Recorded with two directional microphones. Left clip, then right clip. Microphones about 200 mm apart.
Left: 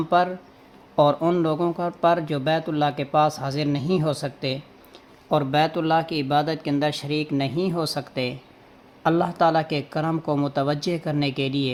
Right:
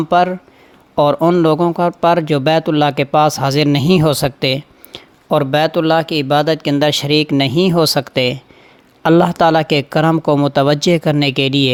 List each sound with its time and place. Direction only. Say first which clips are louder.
0.1 s speech: right 8 dB; 35° right (ahead or behind)